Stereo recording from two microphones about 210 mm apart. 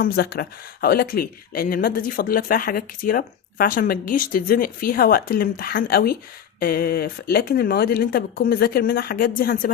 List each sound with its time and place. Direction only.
0.0 s speech: 45° left (ahead or behind)